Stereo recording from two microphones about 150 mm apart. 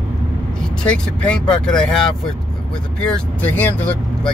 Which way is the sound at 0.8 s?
5° left (ahead or behind).